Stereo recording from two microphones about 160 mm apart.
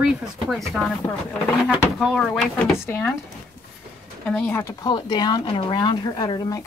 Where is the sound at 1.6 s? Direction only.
5° right (ahead or behind).